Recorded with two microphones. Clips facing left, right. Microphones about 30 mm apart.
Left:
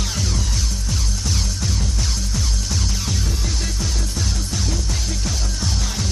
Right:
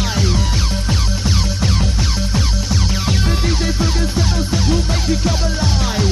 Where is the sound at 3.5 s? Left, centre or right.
Right.